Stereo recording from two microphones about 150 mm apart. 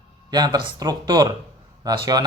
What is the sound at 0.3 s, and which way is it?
A man's voice, 25° right (ahead or behind).